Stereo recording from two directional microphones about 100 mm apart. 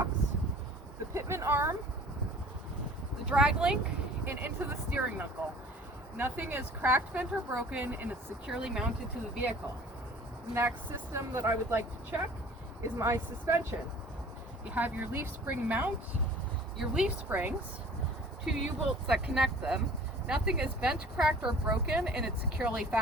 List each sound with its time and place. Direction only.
1.1 s speech: 30° right (ahead or behind)
3.2 s speech: 10° right (ahead or behind)
4.3 s speech: 20° right (ahead or behind)
8.4 s speech: 5° right (ahead or behind)
11.1 s speech: 25° right (ahead or behind)
14.8 s speech: 15° right (ahead or behind)
16.7 s speech: 5° right (ahead or behind)